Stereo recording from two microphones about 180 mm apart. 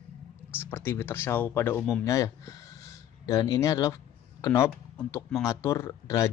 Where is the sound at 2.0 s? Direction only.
15° left (ahead or behind).